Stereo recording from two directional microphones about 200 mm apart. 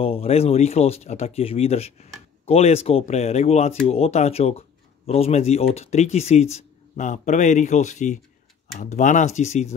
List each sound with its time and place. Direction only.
0.0 s speech: 30° left (ahead or behind)